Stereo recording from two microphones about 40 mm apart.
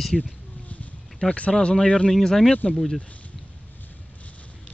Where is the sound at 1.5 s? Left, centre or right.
Centre.